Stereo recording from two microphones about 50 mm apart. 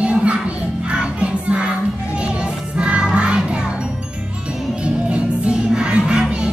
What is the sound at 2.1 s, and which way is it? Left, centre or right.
Music, right.